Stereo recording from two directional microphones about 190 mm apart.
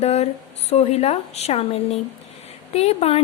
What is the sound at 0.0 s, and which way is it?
A woman's voice, 35° left (ahead or behind).